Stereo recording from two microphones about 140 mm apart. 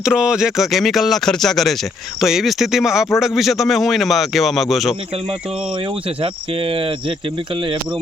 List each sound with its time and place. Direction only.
0.0 s a man's voice: 5° right (ahead or behind)
6.2 s speech: 40° right (ahead or behind)